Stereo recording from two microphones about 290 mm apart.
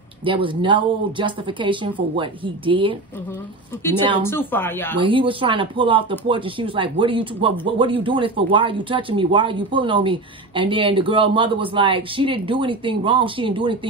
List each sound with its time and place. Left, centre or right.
0.2 s speech: centre
4.2 s speech: centre
4.9 s speech: centre